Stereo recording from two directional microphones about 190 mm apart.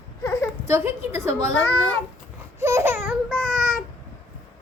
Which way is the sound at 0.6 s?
15° right (ahead or behind).